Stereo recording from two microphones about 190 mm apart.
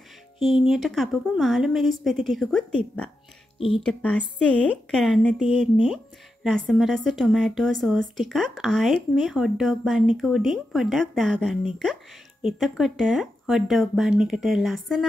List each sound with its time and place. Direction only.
0.4 s a woman's voice: centre (ahead or behind)
3.5 s speech: 30° left (ahead or behind)
3.8 s a woman's voice: 5° left (ahead or behind)